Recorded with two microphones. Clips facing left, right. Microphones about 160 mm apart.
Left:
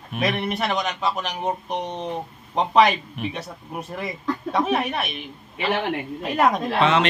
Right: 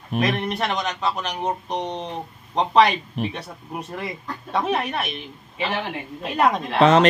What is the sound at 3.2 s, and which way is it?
Speech, 35° right (ahead or behind).